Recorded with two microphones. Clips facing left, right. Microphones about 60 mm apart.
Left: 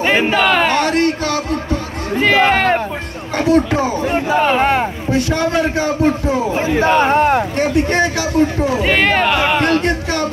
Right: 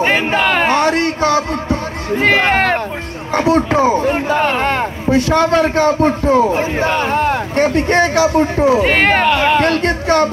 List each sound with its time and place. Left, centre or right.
0.3 s a sound: right
1.2 s music: right
2.2 s speech: right
3.3 s a man's voice: right
4.5 s speech: centre
5.1 s a man's voice: right
6.8 s speech: left
7.5 s a man's voice: right
9.2 s speech: centre
9.8 s speech: right